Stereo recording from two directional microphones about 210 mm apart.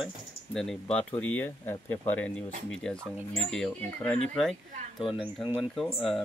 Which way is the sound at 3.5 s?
5° left (ahead or behind).